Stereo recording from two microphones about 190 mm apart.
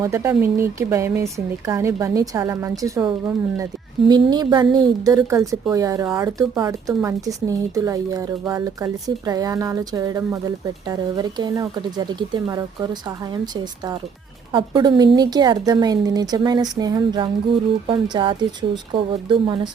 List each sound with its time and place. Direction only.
0.0 s a woman's voice: 15° right (ahead or behind)
14.5 s a woman's voice: 25° right (ahead or behind)